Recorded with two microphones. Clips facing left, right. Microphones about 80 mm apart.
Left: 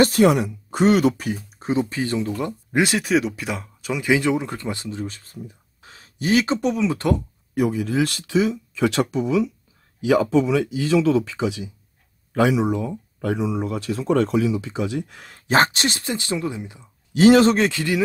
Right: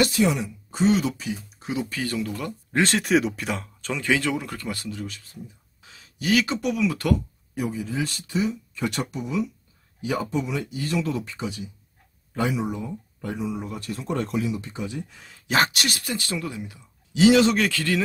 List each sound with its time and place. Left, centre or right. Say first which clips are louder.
0.0 s speech: left 6 dB; left
1.6 s speech: left 7 dB; left
2.7 s speech: left 1 dB; centre; by 7.2 s left
7.5 s speech: left 7 dB; left
15.3 s speech: left 4 dB; left
17.1 s speech: left 4 dB; left
17.6 s speech: left 3 dB; left